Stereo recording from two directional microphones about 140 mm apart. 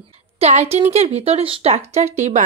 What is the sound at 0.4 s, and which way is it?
A woman's voice, 45° right (ahead or behind).